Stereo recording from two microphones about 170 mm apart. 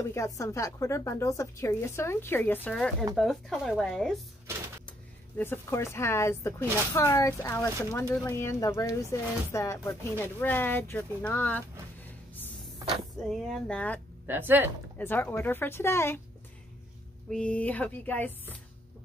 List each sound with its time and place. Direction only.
0.1 s speech: 15° left (ahead or behind); by 4.1 s centre (ahead or behind)
5.4 s speech: 15° left (ahead or behind)
13.3 s speech: 5° left (ahead or behind)
14.2 s speech: 10° right (ahead or behind)
15.0 s speech: 10° left (ahead or behind)
17.3 s speech: 5° left (ahead or behind)